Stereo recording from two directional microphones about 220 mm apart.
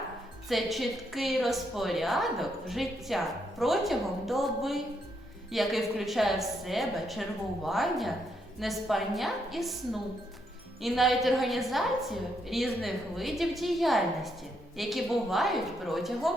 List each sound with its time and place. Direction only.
0.4 s a woman's voice: centre (ahead or behind)